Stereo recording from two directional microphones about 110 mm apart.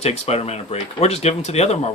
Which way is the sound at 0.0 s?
75° left (ahead or behind).